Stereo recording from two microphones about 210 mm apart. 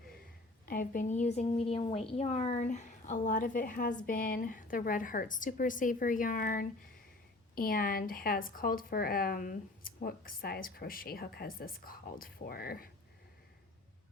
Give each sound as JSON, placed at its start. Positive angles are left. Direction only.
{"t": 0.6, "sound": "a woman's voice", "side_deg": 45}